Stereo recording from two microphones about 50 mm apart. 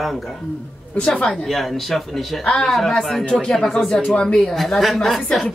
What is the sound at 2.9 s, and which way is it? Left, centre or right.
Speech, centre.